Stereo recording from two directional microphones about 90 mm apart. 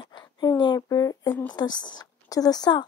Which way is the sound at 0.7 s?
40° left (ahead or behind).